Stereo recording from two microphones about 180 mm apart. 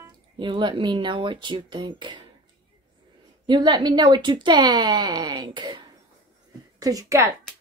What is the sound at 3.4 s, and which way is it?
Speech, 25° right (ahead or behind).